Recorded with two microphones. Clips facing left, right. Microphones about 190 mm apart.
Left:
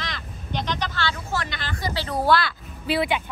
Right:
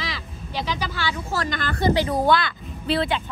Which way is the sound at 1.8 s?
20° right (ahead or behind).